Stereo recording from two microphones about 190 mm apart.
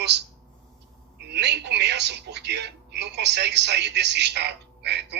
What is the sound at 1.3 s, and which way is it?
Telephone, 60° right (ahead or behind).